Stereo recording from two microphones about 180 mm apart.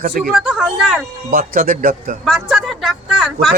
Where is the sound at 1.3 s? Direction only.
50° right (ahead or behind).